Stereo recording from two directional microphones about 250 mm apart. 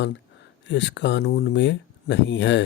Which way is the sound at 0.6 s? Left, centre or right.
Left.